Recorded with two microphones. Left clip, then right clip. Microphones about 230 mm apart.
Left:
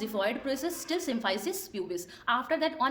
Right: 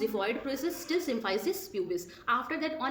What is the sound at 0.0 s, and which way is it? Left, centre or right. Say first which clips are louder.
A woman's voice: even; left.